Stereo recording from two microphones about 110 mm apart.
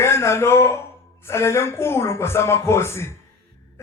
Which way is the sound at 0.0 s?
25° left (ahead or behind).